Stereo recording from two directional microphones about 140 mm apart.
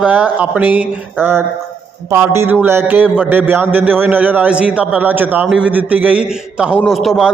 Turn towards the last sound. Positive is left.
turn(degrees=0)  # may be behind; listen again after turning